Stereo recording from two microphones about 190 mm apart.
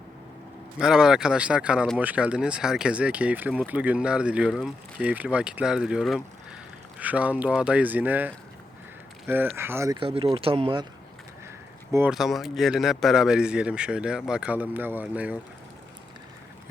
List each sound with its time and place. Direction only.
0.8 s speech: 5° right (ahead or behind)
10.0 s speech: 30° right (ahead or behind)
11.9 s speech: 15° right (ahead or behind)
12.1 s speech: centre (ahead or behind)